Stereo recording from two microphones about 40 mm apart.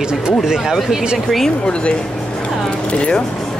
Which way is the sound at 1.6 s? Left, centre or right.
Left.